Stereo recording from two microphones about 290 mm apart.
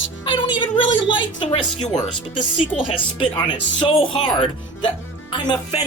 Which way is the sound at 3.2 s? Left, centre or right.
Centre.